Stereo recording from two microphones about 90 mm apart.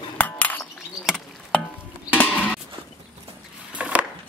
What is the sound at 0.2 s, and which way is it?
Chink, 20° left (ahead or behind).